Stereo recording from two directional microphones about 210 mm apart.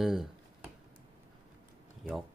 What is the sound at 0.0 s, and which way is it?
Speech, centre (ahead or behind).